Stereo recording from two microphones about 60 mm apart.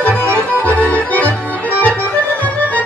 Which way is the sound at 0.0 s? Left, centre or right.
Left.